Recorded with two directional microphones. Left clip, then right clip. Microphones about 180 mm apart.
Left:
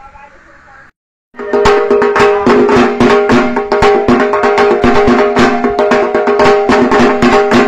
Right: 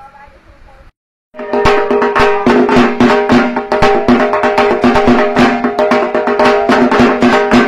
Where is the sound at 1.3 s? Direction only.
15° left (ahead or behind).